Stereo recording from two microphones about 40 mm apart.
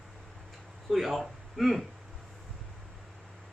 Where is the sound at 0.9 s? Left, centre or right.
Centre.